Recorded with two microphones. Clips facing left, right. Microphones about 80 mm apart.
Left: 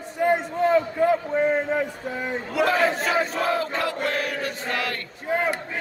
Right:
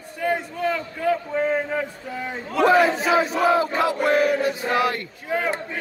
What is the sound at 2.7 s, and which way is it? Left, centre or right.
Crowd, centre.